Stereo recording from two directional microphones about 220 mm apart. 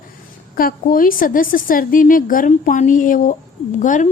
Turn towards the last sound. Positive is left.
turn(degrees=35)  # may be behind; listen again after turning